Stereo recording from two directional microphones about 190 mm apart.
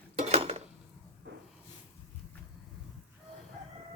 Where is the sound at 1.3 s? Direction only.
65° right (ahead or behind).